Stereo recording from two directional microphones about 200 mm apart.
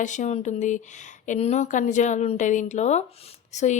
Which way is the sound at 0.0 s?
35° left (ahead or behind).